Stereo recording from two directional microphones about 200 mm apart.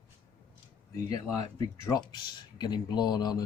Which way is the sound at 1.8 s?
20° left (ahead or behind).